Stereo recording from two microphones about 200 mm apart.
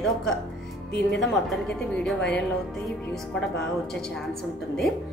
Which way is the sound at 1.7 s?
5° left (ahead or behind).